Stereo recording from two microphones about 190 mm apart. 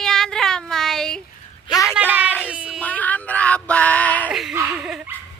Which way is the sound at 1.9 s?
10° right (ahead or behind).